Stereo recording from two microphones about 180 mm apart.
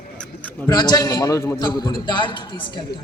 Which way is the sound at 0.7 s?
20° left (ahead or behind).